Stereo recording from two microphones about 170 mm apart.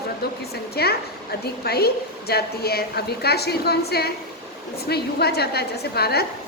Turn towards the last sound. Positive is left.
turn(degrees=70)  # may be behind; listen again after turning